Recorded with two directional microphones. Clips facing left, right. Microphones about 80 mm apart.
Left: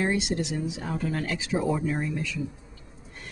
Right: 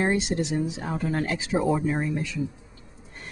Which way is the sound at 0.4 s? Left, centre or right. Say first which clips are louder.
Right 3 dB; right.